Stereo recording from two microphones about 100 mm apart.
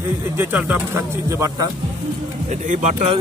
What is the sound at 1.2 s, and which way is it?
Speech, 30° right (ahead or behind).